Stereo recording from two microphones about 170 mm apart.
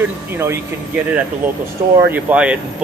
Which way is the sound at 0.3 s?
15° right (ahead or behind).